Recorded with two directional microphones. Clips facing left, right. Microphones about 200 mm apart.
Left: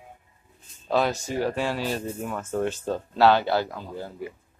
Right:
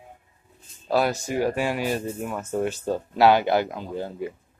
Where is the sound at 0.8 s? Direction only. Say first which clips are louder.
Right 1 dB; 10° right (ahead or behind).